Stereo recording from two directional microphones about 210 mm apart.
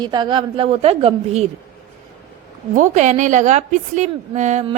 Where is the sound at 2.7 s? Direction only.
35° right (ahead or behind).